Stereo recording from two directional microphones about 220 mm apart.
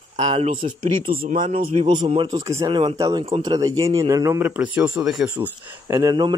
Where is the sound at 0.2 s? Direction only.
25° right (ahead or behind).